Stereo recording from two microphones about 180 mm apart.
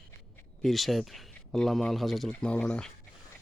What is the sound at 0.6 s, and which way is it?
Speech, centre (ahead or behind).